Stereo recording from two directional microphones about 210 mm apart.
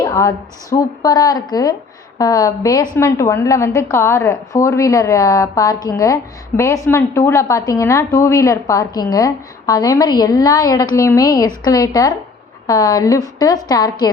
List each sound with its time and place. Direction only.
0.0 s a woman's voice: 15° left (ahead or behind)